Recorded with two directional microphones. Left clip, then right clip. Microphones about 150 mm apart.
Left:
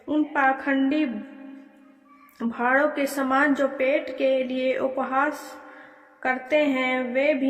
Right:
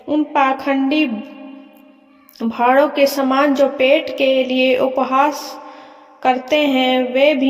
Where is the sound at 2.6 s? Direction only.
40° right (ahead or behind).